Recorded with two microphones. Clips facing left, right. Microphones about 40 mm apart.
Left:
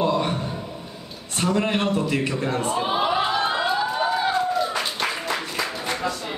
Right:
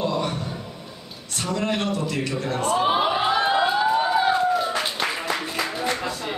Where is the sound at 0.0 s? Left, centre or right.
Left.